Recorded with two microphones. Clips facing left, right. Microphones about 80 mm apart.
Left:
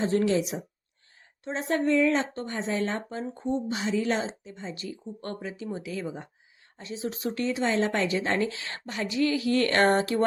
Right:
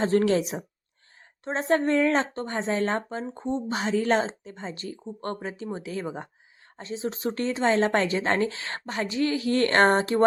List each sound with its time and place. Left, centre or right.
0.0 s a woman's voice: right
3.7 s a woman's voice: right